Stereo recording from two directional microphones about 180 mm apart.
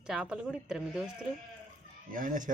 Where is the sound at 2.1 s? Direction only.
50° right (ahead or behind).